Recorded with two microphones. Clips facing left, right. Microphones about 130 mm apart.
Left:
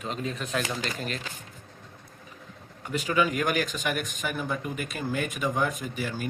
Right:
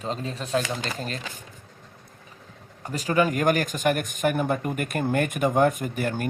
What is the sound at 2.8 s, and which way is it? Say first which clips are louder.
Speech: right 3 dB; 40° right (ahead or behind).